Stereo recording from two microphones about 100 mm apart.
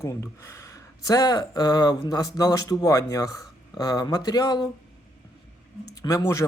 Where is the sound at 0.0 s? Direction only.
30° left (ahead or behind); by 4.7 s 45° left (ahead or behind).